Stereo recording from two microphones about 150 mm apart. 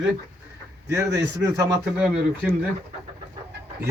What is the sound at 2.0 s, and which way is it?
Speech, 10° right (ahead or behind).